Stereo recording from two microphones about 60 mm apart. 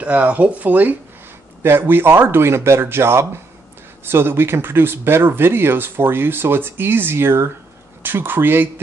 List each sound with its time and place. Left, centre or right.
0.0 s speech: right
1.6 s speech: right